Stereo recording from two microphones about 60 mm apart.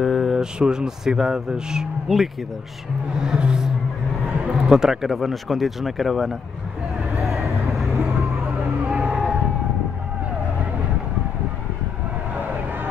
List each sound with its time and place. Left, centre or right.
0.0 s a sound: centre
0.4 s speech: centre
3.2 s music: centre
4.5 s speech: centre
7.2 s vehicle: centre
7.9 s vehicle: right
8.8 s vehicle: centre